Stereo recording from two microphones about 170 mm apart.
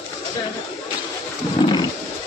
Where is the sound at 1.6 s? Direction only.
25° left (ahead or behind).